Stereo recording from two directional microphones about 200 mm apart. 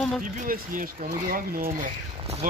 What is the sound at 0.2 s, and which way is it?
Speech, 40° right (ahead or behind).